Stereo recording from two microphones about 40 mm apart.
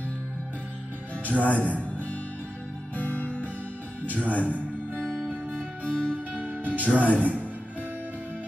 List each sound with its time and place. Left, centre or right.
1.4 s a man's voice: left
3.0 s music: left
6.4 s music: right